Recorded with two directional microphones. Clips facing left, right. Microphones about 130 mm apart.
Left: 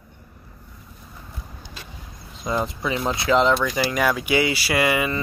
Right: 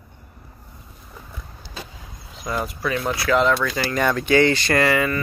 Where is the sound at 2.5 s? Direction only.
20° left (ahead or behind).